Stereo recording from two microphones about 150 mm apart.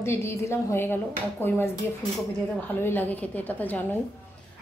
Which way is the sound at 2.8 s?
15° left (ahead or behind).